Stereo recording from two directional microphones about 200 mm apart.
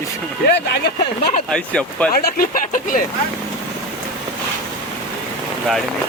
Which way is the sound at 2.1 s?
45° left (ahead or behind).